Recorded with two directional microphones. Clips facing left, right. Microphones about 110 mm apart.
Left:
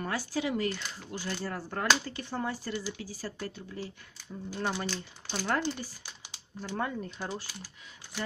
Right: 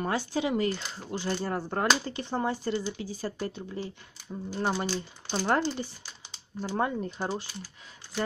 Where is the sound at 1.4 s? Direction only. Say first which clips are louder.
Right 1 dB; 25° right (ahead or behind).